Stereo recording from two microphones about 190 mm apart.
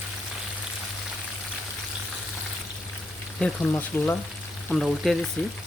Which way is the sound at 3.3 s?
5° left (ahead or behind).